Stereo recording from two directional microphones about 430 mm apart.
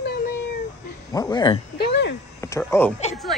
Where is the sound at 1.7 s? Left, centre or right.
Left.